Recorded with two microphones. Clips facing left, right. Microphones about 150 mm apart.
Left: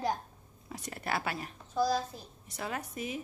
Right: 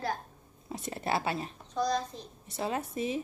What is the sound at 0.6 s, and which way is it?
Speech, 25° right (ahead or behind).